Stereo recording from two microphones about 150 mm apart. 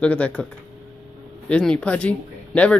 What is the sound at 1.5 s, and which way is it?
Speech, 5° left (ahead or behind).